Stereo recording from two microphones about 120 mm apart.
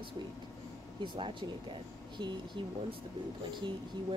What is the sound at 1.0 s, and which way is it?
Speech, 45° right (ahead or behind).